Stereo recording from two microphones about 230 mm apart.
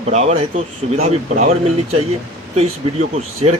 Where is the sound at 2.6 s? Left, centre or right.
Right.